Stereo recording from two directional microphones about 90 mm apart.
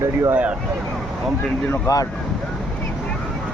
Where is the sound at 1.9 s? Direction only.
40° left (ahead or behind).